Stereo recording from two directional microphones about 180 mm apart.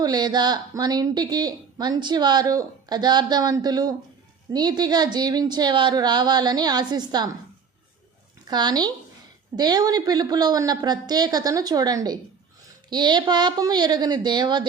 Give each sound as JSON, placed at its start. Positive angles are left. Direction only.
{"t": 0.0, "sound": "speech", "side_deg": -20}
{"t": 8.4, "sound": "speech", "side_deg": -25}